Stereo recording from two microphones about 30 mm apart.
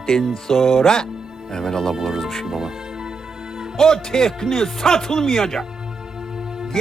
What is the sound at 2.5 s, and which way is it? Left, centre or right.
Speech, centre.